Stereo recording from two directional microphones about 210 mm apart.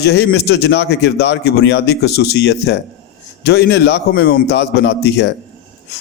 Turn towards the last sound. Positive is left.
turn(degrees=55)  # may be behind; listen again after turning